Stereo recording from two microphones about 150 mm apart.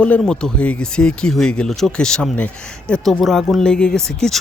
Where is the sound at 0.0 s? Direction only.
5° left (ahead or behind).